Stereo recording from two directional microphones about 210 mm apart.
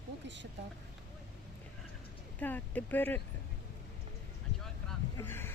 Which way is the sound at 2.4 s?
10° left (ahead or behind).